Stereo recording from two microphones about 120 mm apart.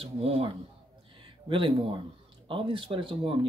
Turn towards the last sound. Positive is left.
turn(degrees=-45)  # may be behind; listen again after turning